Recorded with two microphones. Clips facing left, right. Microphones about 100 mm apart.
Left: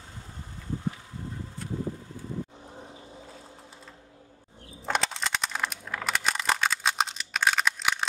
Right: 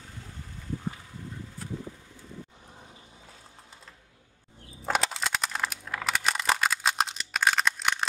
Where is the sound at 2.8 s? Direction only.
30° left (ahead or behind).